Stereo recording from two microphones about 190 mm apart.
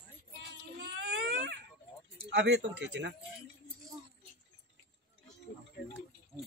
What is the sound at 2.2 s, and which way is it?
Speech, 65° right (ahead or behind).